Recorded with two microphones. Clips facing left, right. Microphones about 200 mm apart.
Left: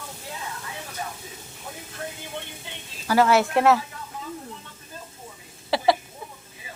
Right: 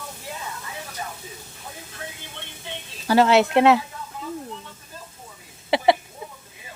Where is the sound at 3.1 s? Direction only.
25° right (ahead or behind).